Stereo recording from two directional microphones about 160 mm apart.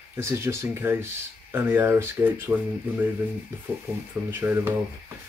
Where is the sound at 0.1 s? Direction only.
15° right (ahead or behind).